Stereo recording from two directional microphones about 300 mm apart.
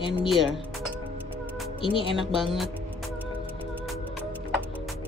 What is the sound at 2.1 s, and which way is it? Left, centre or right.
Speech, centre.